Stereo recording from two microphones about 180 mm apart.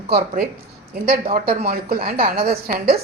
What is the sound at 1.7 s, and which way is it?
Speech, 55° right (ahead or behind).